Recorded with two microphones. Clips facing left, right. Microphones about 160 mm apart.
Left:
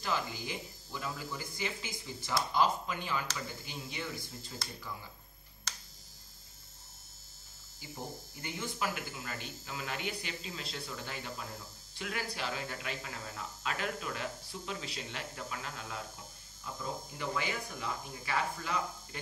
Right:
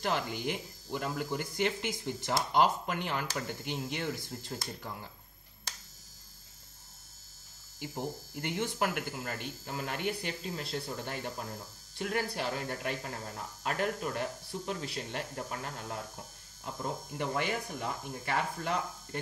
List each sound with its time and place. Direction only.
0.0 s speech: 70° right (ahead or behind)
4.5 s speech: 55° right (ahead or behind)
7.8 s speech: 70° right (ahead or behind); by 16.0 s 50° right (ahead or behind)
17.4 s speech: 55° right (ahead or behind)